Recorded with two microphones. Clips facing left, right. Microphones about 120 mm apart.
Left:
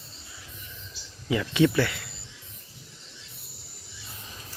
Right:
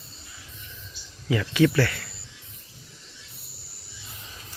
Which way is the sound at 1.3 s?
20° left (ahead or behind).